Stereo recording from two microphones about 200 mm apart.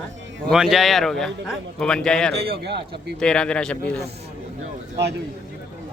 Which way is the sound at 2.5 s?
55° right (ahead or behind).